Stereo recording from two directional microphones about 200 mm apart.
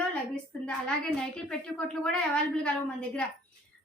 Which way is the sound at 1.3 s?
5° left (ahead or behind).